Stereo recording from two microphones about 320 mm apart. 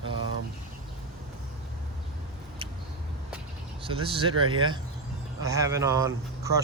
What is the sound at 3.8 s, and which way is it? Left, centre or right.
Speech, centre.